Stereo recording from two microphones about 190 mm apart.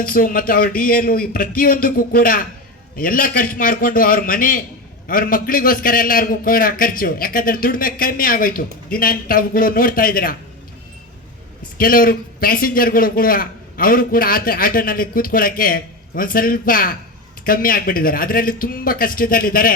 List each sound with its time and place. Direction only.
0.0 s a man's voice: 50° left (ahead or behind)
11.8 s a man's voice: 50° left (ahead or behind)